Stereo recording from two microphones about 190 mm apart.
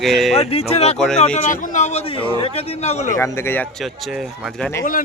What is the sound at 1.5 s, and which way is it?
A man's voice, 45° left (ahead or behind).